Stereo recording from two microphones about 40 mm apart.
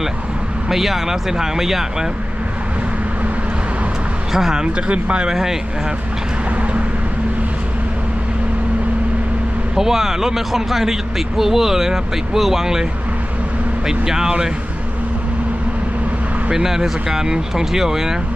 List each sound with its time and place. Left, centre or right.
0.7 s speech: centre
4.3 s speech: centre
4.6 s speech: right
5.3 s speech: centre
9.7 s speech: centre
13.8 s speech: centre
16.5 s speech: centre